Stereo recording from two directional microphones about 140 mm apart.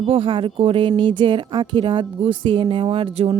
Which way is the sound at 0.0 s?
40° right (ahead or behind).